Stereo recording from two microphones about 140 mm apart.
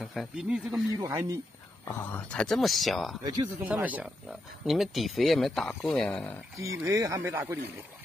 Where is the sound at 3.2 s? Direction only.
25° right (ahead or behind).